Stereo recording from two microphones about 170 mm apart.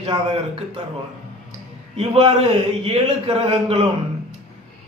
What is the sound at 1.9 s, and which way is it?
A man's voice, 35° right (ahead or behind).